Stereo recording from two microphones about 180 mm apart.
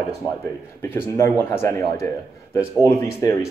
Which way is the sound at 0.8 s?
15° left (ahead or behind).